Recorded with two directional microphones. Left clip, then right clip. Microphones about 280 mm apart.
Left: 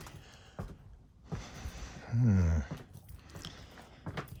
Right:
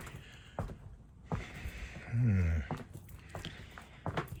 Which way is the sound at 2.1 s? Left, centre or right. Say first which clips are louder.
Left 4 dB; left.